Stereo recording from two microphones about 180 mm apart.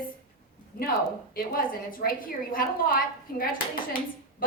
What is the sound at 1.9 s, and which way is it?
A woman's voice, 50° left (ahead or behind).